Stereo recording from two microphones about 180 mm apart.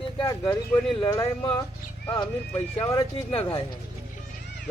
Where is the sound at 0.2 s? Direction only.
15° left (ahead or behind).